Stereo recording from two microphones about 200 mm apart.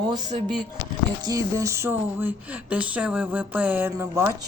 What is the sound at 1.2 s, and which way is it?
Speech, 20° right (ahead or behind).